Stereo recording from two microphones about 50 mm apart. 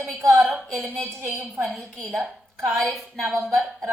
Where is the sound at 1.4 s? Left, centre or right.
Centre.